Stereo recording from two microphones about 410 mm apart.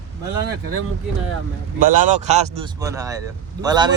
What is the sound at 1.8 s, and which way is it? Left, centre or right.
Speech, centre.